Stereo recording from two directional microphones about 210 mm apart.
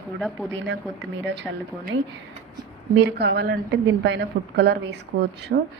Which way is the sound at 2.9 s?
55° right (ahead or behind).